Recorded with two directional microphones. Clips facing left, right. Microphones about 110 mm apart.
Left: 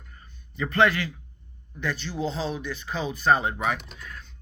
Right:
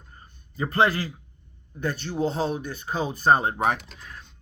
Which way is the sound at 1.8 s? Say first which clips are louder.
Right 3 dB; 45° right (ahead or behind).